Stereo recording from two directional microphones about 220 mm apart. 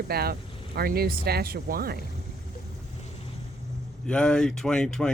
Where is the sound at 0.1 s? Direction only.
45° right (ahead or behind).